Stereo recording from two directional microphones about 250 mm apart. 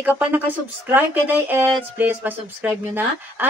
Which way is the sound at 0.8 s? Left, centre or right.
Centre.